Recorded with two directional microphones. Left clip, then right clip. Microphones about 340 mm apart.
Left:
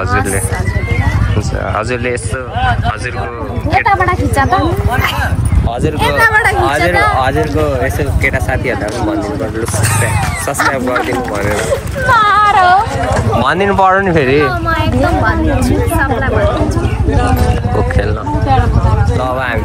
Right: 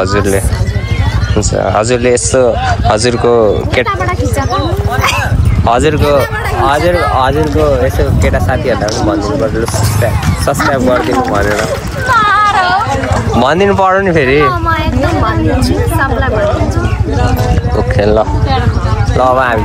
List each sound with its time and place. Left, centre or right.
1.6 s speech: centre
5.7 s speech: right
6.1 s speech: centre
12.1 s a sound: left
13.4 s speech: centre
19.3 s speech: centre